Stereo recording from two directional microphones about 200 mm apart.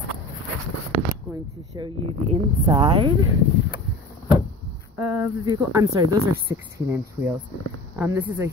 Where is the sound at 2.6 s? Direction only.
25° right (ahead or behind).